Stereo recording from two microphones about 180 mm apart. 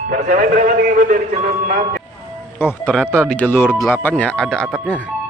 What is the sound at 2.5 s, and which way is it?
Speech, 10° left (ahead or behind).